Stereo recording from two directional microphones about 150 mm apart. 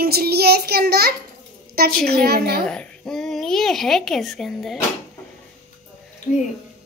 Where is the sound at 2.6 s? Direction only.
5° left (ahead or behind).